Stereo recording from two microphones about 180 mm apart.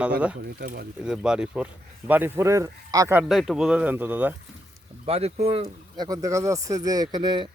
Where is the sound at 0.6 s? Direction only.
55° right (ahead or behind).